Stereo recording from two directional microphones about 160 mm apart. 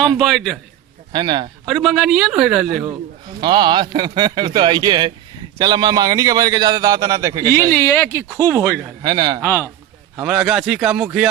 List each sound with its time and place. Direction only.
0.0 s a man's voice: centre (ahead or behind)
1.1 s a man's voice: 30° right (ahead or behind)
1.6 s a man's voice: centre (ahead or behind)
3.4 s a man's voice: 30° right (ahead or behind)
7.7 s speech: 15° left (ahead or behind)
9.0 s a man's voice: 25° right (ahead or behind)
9.4 s speech: 15° left (ahead or behind)
10.2 s a man's voice: 5° right (ahead or behind)